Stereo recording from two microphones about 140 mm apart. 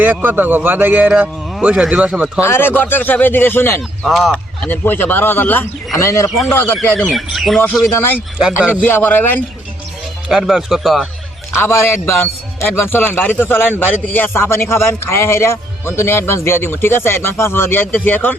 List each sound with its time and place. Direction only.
0.0 s speech: 15° right (ahead or behind)
2.4 s a man's voice: 15° left (ahead or behind)
4.0 s a man's voice: centre (ahead or behind)
7.0 s speech: centre (ahead or behind)
7.9 s a man's voice: 15° left (ahead or behind)
8.4 s speech: 5° right (ahead or behind)
8.8 s a man's voice: 10° left (ahead or behind)
10.2 s speech: 5° right (ahead or behind)
11.5 s a man's voice: 15° left (ahead or behind)